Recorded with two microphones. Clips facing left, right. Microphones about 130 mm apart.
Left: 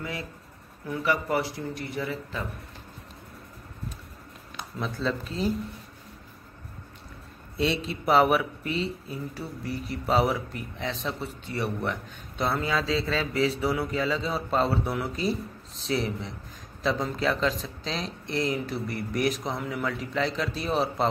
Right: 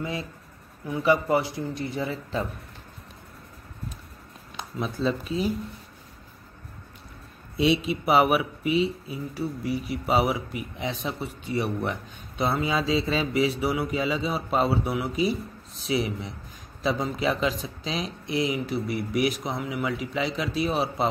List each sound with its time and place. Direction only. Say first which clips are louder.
0.0 s speech: right 3 dB; 25° right (ahead or behind)
5.0 s speech: right 3 dB; 10° right (ahead or behind)
7.5 s speech: right 5 dB; 10° right (ahead or behind)